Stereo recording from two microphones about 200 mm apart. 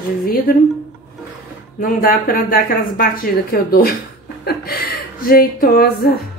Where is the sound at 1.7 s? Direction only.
45° left (ahead or behind).